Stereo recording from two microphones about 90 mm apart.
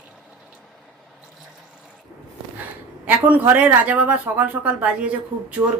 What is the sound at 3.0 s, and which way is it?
A woman's voice, 20° right (ahead or behind).